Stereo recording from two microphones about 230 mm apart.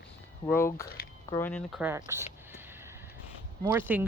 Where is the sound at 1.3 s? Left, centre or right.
Centre.